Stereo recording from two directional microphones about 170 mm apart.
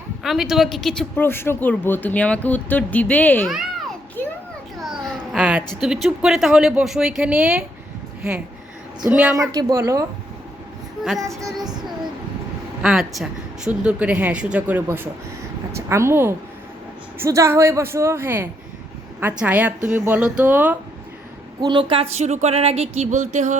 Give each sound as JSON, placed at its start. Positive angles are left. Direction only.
{"t": 0.2, "sound": "speech", "side_deg": 0}
{"t": 3.4, "sound": "a sound", "side_deg": 0}
{"t": 4.2, "sound": "children playing", "side_deg": 10}
{"t": 4.8, "sound": "babbling", "side_deg": 0}
{"t": 5.8, "sound": "speech", "side_deg": -5}
{"t": 9.0, "sound": "speech", "side_deg": -5}
{"t": 9.5, "sound": "speech", "side_deg": -20}
{"t": 12.8, "sound": "speech", "side_deg": 0}
{"t": 21.6, "sound": "a sound", "side_deg": -30}
{"t": 22.1, "sound": "a sound", "side_deg": -40}